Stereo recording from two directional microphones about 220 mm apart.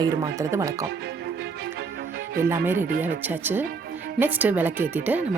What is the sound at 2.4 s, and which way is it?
Speech, 10° right (ahead or behind).